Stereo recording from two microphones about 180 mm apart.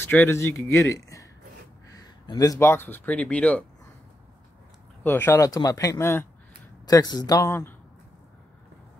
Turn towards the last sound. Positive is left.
turn(degrees=15)  # may be behind; listen again after turning